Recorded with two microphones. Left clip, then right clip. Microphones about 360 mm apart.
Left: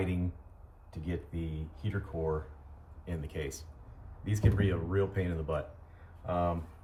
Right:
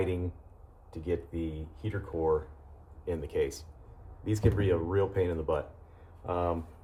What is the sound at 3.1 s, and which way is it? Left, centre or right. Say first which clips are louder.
Speech: right 9 dB; centre.